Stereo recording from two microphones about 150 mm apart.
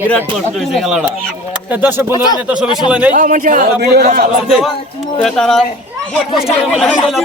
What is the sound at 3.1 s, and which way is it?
Speech, 60° right (ahead or behind).